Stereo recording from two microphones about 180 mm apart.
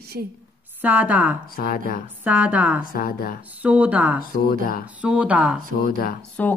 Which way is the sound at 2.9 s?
55° left (ahead or behind).